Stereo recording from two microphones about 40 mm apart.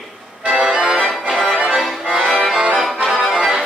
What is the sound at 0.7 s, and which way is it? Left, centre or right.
Accordion, centre.